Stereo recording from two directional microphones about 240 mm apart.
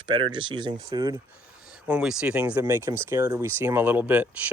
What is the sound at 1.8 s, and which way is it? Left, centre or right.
Speech, centre.